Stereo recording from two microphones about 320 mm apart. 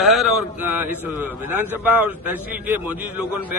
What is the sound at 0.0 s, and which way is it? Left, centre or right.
A man's voice, centre.